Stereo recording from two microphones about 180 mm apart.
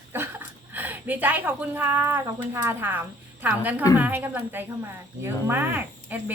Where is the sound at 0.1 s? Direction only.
10° right (ahead or behind).